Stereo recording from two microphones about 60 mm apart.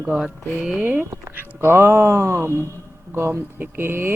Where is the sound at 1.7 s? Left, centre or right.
Right.